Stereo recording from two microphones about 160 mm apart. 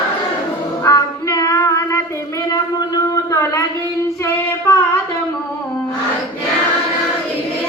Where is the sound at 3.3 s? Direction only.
20° left (ahead or behind).